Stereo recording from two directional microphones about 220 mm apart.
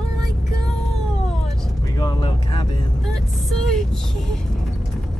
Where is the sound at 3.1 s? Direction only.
Centre (ahead or behind).